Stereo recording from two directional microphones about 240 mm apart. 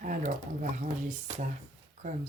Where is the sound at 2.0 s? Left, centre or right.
Right.